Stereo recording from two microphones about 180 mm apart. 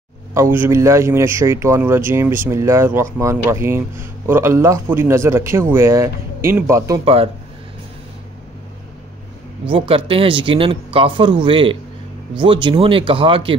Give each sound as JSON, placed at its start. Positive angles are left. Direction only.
{"t": 0.3, "sound": "speech", "side_deg": -15}
{"t": 9.7, "sound": "speech", "side_deg": -30}